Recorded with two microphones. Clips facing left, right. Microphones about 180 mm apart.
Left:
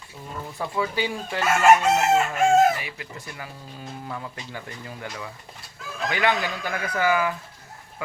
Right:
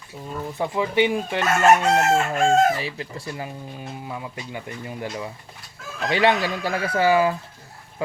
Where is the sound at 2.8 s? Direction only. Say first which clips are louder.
Right 6 dB; 30° right (ahead or behind).